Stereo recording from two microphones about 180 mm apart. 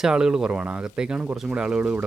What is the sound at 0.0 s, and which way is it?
Speech, 5° right (ahead or behind).